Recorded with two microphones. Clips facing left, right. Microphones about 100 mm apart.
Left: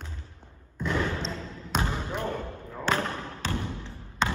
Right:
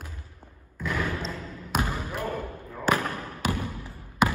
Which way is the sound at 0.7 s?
25° left (ahead or behind).